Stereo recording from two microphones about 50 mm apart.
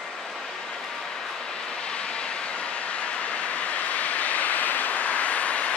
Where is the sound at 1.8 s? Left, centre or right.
Centre.